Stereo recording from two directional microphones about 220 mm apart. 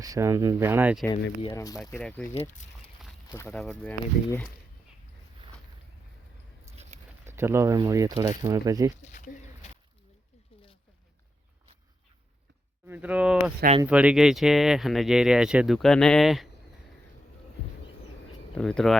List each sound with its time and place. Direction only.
0.0 s speech: 15° right (ahead or behind)
1.4 s speech: 20° left (ahead or behind)
1.9 s speech: 5° left (ahead or behind)
2.3 s speech: 30° left (ahead or behind)
3.3 s speech: 5° left (ahead or behind)
6.7 s a sound: 30° right (ahead or behind)
7.3 s speech: 10° right (ahead or behind)
9.1 s a sound: 35° left (ahead or behind)
12.9 s speech: 5° right (ahead or behind)
13.4 s speech: 30° right (ahead or behind)
13.8 s speech: 5° right (ahead or behind)
18.5 s speech: 5° left (ahead or behind)